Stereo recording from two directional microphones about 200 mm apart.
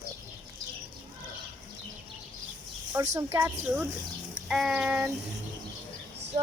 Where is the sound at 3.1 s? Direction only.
15° right (ahead or behind).